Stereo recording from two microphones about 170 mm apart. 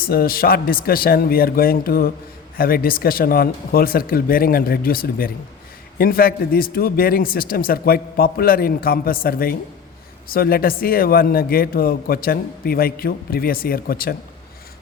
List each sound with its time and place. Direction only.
0.0 s speech: 60° left (ahead or behind)